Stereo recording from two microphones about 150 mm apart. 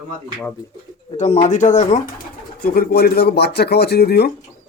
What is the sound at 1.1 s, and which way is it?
Speech, 50° left (ahead or behind).